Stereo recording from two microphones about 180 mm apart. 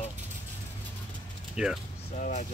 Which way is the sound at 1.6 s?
5° right (ahead or behind).